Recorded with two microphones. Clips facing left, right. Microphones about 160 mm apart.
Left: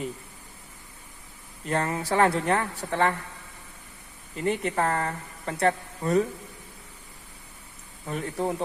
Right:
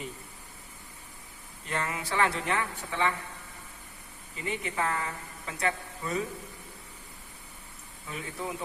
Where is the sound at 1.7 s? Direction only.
40° left (ahead or behind).